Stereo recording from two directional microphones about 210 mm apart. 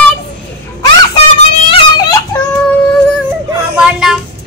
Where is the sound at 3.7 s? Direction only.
5° right (ahead or behind).